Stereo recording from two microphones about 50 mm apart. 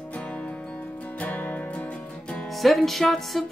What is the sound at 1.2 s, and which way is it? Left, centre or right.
Music, left.